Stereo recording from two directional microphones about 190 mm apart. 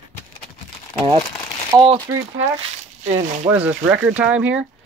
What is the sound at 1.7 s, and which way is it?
Speech, 15° right (ahead or behind).